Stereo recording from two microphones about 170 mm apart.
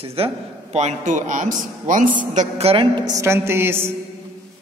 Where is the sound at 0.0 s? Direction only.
35° right (ahead or behind); by 3.9 s 15° right (ahead or behind).